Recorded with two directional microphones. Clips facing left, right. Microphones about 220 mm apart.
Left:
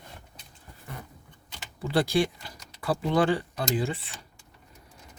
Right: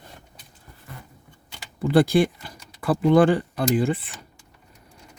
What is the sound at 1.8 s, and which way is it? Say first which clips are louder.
Speech: right 7 dB; 50° right (ahead or behind).